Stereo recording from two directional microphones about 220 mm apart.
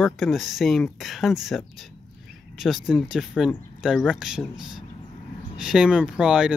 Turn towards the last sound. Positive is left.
turn(degrees=-5)  # may be behind; listen again after turning